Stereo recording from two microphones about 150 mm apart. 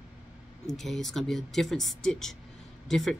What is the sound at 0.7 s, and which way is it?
Speech, centre (ahead or behind).